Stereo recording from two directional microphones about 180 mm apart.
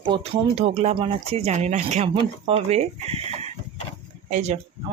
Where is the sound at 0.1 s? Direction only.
35° right (ahead or behind).